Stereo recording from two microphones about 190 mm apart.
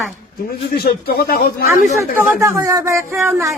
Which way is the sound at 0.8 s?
55° left (ahead or behind).